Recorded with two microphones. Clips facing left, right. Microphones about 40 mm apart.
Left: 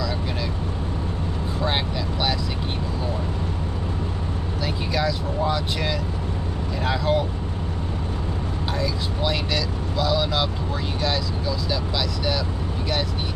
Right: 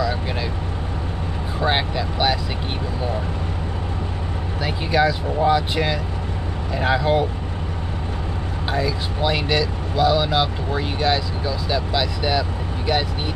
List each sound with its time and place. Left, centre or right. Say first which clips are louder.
1.6 s vehicle: right 5 dB; right
4.6 s speech: right 6 dB; right
8.7 s speech: right 5 dB; centre